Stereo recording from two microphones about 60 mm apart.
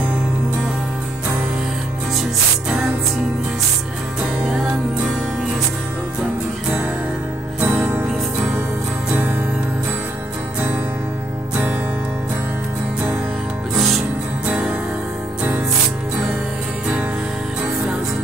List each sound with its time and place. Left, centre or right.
4.5 s music: centre
7.6 s music: right
14.5 s music: centre